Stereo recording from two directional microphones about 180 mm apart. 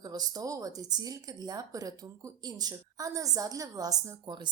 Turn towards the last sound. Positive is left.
turn(degrees=-25)  # may be behind; listen again after turning